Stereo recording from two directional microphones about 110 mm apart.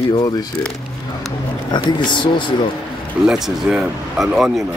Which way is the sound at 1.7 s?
45° left (ahead or behind).